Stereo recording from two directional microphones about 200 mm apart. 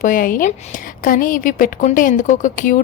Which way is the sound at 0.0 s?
45° left (ahead or behind).